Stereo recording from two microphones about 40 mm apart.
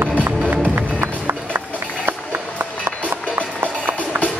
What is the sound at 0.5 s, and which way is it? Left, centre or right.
Music, right.